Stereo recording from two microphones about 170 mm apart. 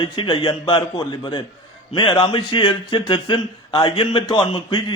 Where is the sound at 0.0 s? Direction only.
30° left (ahead or behind).